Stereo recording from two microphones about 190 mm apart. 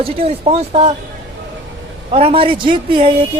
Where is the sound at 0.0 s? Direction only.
30° right (ahead or behind).